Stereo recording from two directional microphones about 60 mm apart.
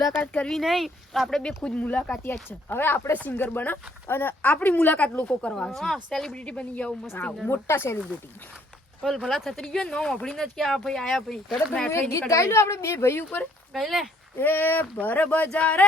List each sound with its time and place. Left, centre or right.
0.1 s speech: left
0.6 s speech: centre
1.4 s a woman's voice: centre
2.2 s speech: left
5.4 s a woman's voice: centre
6.3 s speech: centre
7.5 s a woman's voice: left
9.0 s speech: centre
9.3 s a woman's voice: centre
11.9 s a woman's voice: left
13.7 s speech: centre
14.3 s speech: left